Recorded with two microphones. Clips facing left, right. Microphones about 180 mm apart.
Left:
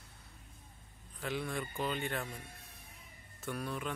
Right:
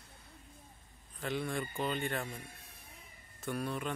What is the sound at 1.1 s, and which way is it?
Speech, centre (ahead or behind).